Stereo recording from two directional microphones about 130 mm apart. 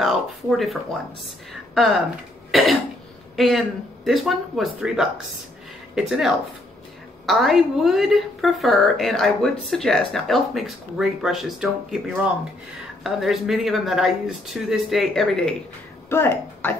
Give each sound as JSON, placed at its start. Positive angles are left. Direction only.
{"t": 0.0, "sound": "a woman's voice", "side_deg": 0}
{"t": 2.5, "sound": "a woman's voice", "side_deg": 0}
{"t": 16.1, "sound": "speech", "side_deg": 20}